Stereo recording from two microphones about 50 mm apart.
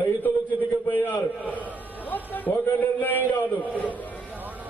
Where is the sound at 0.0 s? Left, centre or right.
Left.